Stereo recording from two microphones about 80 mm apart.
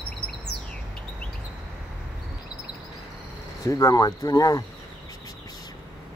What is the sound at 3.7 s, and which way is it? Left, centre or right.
Speech, left.